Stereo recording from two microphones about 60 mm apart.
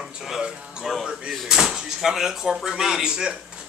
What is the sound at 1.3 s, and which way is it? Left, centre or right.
Speech, centre.